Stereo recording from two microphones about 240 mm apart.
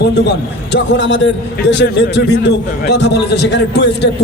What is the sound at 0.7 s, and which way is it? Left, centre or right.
A man's voice, left.